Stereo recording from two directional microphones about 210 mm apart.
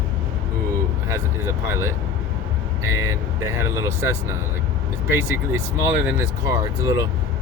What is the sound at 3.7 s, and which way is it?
Speech, 15° right (ahead or behind).